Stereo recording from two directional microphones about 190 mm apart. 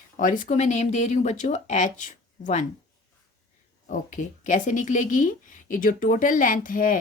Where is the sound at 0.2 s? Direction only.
45° left (ahead or behind).